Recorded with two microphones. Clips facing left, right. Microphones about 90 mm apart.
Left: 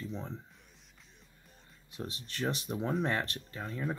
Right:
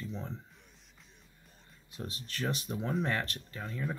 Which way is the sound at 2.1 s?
25° left (ahead or behind).